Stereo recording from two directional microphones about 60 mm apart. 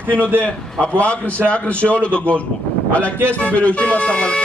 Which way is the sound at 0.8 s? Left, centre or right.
Left.